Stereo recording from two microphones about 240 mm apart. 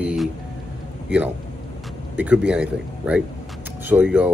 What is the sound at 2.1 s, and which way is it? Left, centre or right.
Speech, centre.